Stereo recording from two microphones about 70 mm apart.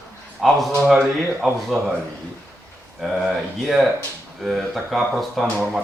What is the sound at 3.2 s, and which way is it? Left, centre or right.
Speech, centre.